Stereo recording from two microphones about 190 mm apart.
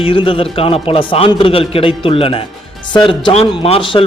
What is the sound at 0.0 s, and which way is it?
A man's voice, 30° left (ahead or behind).